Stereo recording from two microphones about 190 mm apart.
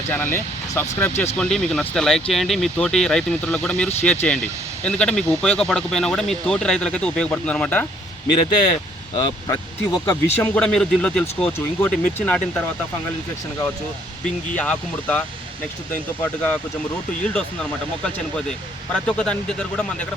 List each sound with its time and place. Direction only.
0.1 s speech: 10° left (ahead or behind)
9.1 s speech: 20° left (ahead or behind)
10.5 s speech: 5° left (ahead or behind)
14.3 s speech: 5° left (ahead or behind)
16.2 s speech: 10° left (ahead or behind)